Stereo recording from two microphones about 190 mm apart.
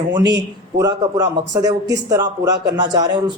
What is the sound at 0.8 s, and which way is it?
Speech, 20° right (ahead or behind).